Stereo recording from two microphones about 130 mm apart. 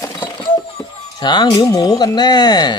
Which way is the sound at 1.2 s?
35° left (ahead or behind).